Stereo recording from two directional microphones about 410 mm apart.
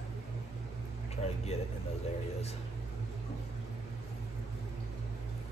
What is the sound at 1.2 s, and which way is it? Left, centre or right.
Speech, centre.